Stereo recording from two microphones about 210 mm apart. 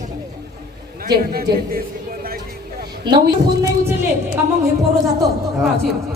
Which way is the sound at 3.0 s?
20° right (ahead or behind).